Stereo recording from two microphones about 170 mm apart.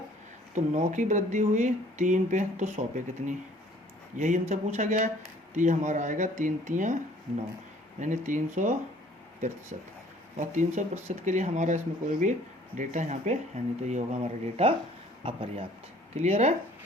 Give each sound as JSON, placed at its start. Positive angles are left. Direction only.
{"t": 0.5, "sound": "speech", "side_deg": -45}
{"t": 10.3, "sound": "speech", "side_deg": -45}